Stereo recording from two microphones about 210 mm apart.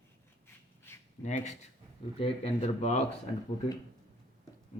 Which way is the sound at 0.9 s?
10° left (ahead or behind).